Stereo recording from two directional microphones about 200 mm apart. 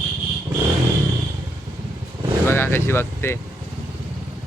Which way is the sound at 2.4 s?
10° left (ahead or behind).